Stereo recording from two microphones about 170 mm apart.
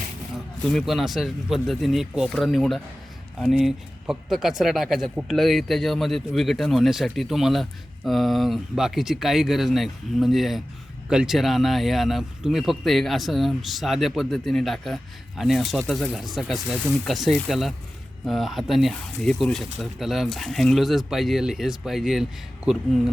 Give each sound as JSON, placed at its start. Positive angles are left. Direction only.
{"t": 0.7, "sound": "speech", "side_deg": 0}